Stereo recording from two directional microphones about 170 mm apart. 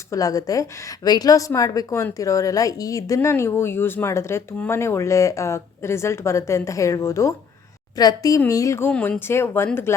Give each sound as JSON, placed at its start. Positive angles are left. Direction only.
{"t": 0.1, "sound": "a woman's voice", "side_deg": 20}